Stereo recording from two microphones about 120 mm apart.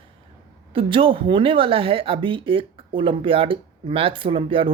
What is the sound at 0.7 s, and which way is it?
Speech, 45° right (ahead or behind).